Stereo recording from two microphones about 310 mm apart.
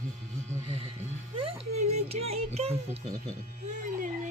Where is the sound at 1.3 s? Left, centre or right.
Centre.